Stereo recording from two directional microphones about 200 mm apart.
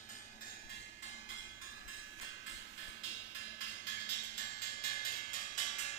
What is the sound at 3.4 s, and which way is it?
Music, 65° left (ahead or behind).